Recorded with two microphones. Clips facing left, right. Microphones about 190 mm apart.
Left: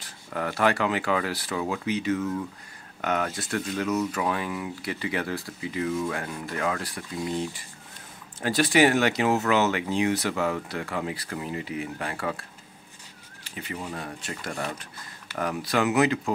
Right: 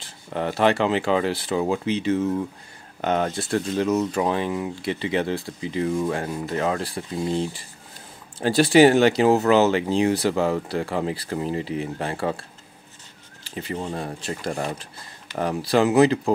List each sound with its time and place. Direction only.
0.0 s speech: 25° right (ahead or behind)